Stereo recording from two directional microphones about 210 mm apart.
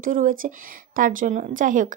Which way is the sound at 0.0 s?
40° right (ahead or behind).